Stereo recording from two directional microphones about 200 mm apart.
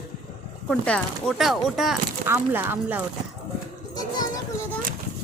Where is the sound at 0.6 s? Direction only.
5° left (ahead or behind).